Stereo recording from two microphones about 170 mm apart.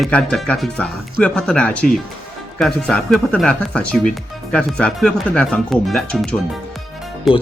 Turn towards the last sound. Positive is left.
turn(degrees=0)  # may be behind; listen again after turning